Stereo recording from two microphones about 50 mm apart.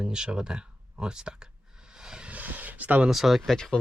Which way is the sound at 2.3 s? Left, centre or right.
Right.